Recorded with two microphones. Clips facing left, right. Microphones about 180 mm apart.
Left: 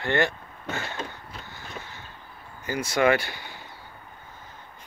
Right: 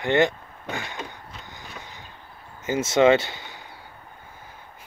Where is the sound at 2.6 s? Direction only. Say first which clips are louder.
Right 5 dB; 20° right (ahead or behind).